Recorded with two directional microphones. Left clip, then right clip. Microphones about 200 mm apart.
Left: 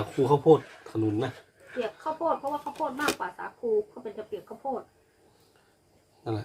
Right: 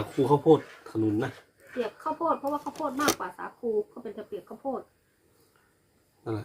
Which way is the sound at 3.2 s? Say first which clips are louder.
Left 2 dB; 40° right (ahead or behind).